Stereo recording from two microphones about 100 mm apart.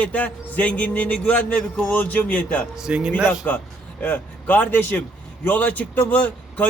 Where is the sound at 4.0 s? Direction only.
15° left (ahead or behind).